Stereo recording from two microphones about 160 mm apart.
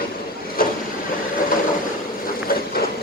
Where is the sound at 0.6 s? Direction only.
65° left (ahead or behind).